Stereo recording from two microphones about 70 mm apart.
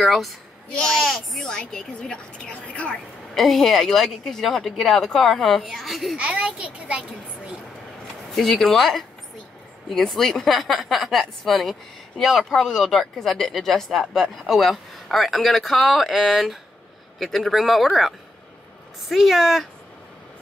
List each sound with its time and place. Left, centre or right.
0.0 s speech: centre
3.3 s speech: centre
6.1 s a child's voice: centre
8.3 s speech: centre